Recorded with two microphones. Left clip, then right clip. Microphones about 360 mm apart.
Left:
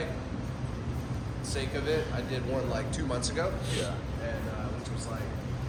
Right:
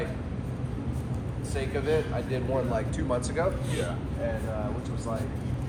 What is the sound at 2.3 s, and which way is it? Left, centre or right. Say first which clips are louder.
Speech: right 4 dB; centre.